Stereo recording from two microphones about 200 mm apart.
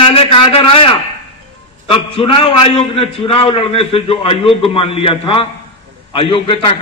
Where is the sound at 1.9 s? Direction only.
25° left (ahead or behind).